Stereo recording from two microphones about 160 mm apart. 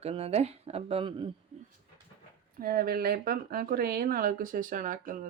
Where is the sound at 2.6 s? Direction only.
65° right (ahead or behind).